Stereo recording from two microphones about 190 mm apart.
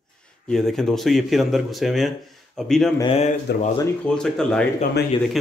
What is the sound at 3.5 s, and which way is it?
Speech, 60° left (ahead or behind).